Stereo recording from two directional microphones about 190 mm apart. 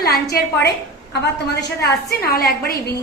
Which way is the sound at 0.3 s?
55° left (ahead or behind).